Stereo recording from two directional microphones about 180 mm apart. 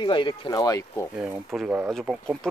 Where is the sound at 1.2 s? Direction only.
5° right (ahead or behind).